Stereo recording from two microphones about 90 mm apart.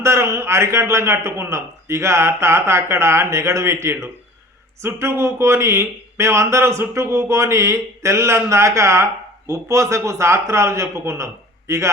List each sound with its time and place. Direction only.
0.0 s speech: 30° right (ahead or behind)